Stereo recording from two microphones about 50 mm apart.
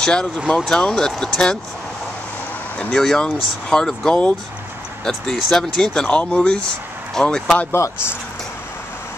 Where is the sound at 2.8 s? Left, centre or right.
Centre.